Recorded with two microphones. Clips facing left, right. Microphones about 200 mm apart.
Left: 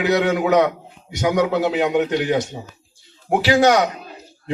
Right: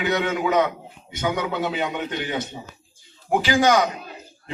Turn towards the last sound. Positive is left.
turn(degrees=70)  # may be behind; listen again after turning